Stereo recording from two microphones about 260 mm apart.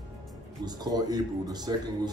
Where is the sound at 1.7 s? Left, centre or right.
Centre.